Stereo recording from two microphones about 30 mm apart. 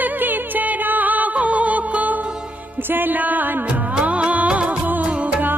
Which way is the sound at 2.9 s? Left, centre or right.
Right.